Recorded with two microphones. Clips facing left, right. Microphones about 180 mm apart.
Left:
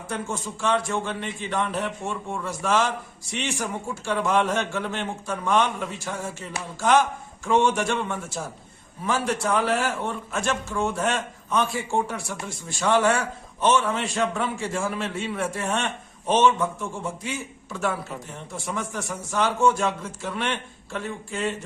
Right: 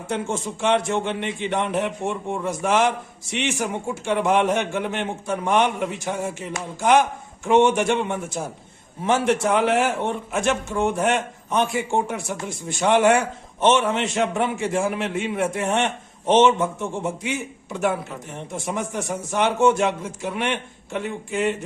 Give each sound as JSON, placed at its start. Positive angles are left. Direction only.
{"t": 0.1, "sound": "a man's voice", "side_deg": -25}